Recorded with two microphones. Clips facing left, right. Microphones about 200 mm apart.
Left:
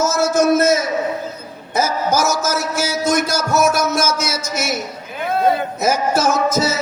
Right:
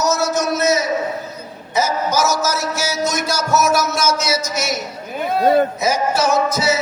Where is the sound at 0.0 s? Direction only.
50° left (ahead or behind).